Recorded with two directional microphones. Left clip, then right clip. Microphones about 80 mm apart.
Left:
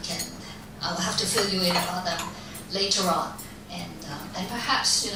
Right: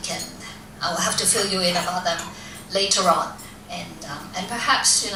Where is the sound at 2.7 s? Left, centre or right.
Right.